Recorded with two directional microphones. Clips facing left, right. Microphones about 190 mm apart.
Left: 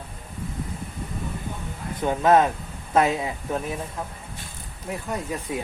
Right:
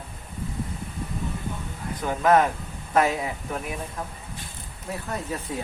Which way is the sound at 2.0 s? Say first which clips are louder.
Left 2 dB; 25° left (ahead or behind).